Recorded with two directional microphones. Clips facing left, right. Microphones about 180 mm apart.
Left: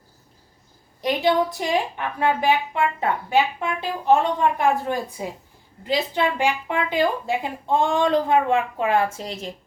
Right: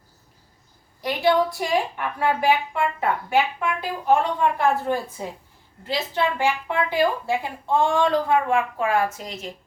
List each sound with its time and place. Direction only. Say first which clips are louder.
1.0 s a woman's voice: even; 20° left (ahead or behind)